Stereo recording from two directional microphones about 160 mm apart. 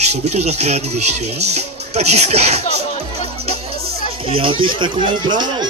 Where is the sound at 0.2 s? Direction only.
45° right (ahead or behind).